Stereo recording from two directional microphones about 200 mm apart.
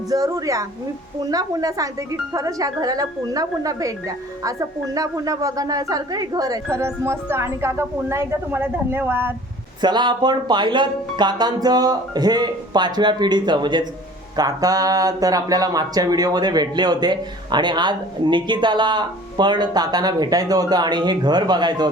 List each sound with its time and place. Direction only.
0.1 s a woman's voice: 15° right (ahead or behind)
4.9 s a woman's voice: 15° right (ahead or behind)
9.8 s speech: 20° right (ahead or behind)